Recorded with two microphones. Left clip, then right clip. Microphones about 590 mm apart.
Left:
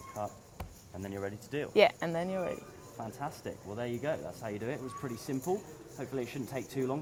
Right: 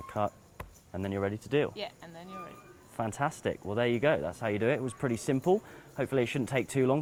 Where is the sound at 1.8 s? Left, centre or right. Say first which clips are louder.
Left 15 dB; left.